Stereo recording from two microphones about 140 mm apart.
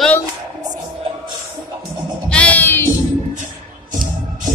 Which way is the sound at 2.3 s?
10° left (ahead or behind).